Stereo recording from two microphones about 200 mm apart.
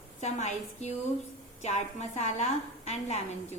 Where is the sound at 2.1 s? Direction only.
35° left (ahead or behind).